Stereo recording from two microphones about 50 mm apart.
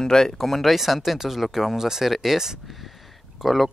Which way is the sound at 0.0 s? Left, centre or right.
Centre.